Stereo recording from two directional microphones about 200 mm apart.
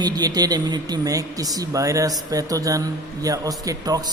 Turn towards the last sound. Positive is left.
turn(degrees=-20)  # may be behind; listen again after turning